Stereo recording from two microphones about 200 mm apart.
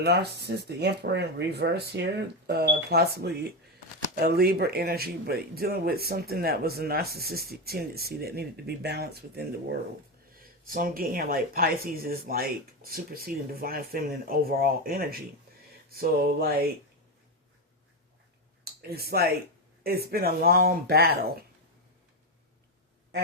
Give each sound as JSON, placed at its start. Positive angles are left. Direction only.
{"t": 0.0, "sound": "speech", "side_deg": -55}
{"t": 18.6, "sound": "speech", "side_deg": -50}